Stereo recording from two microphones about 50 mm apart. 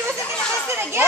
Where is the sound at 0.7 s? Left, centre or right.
Right.